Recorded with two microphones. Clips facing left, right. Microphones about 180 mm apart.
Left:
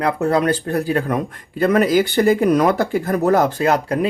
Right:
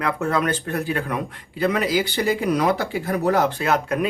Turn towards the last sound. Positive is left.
turn(degrees=35)  # may be behind; listen again after turning